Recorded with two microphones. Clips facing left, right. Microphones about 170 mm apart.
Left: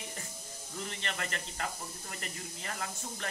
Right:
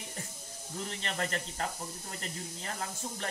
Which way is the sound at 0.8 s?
35° right (ahead or behind).